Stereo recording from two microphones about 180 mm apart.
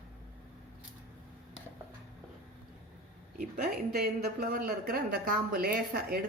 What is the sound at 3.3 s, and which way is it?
Speech, 50° right (ahead or behind).